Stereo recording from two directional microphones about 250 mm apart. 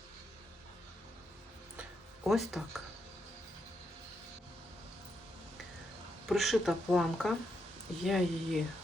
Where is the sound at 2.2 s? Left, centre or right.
Centre.